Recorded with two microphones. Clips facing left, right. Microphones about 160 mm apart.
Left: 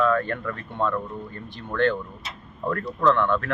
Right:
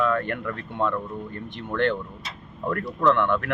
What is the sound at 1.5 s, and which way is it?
Speech, 20° right (ahead or behind).